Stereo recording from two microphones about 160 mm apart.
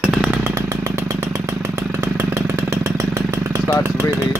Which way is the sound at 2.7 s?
20° right (ahead or behind).